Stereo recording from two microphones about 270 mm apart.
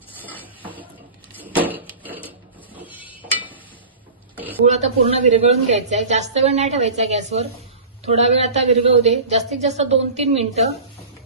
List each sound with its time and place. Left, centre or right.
0.2 s dishes: centre
0.6 s a sound: centre
4.6 s a woman's voice: right